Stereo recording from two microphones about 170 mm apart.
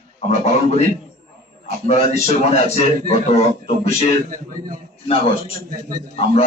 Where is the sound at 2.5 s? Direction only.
40° left (ahead or behind).